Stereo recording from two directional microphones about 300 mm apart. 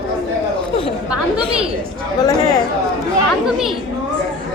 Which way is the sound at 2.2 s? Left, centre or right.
Centre.